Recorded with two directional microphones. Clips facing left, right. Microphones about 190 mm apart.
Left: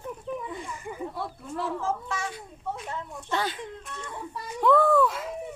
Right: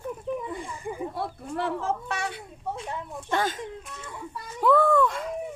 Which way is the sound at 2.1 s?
65° right (ahead or behind).